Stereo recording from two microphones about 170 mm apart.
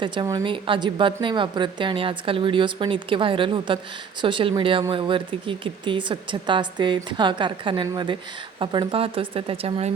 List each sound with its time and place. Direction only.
0.0 s speech: 30° right (ahead or behind)